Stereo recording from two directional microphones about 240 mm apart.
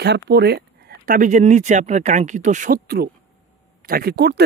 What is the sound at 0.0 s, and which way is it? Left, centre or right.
Speech, right.